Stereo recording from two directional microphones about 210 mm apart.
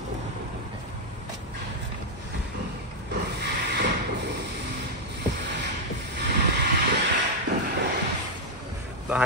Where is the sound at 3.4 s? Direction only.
50° right (ahead or behind).